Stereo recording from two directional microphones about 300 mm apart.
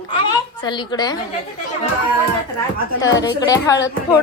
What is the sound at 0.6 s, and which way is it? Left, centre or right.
Speech, centre.